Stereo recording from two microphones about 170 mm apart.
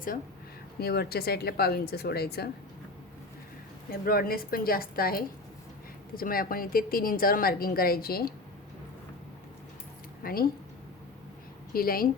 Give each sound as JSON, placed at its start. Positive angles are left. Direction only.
{"t": 0.8, "sound": "speech", "side_deg": 65}
{"t": 4.0, "sound": "a woman's voice", "side_deg": 60}
{"t": 10.2, "sound": "a woman's voice", "side_deg": 60}
{"t": 11.7, "sound": "a woman's voice", "side_deg": 60}